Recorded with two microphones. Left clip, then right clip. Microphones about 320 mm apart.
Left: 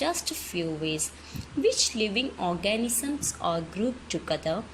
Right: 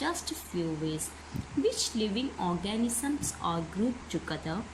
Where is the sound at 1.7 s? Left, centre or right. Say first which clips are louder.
Left 6 dB; centre.